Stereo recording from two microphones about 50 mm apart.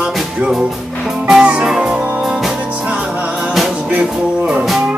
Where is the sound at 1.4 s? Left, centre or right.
Right.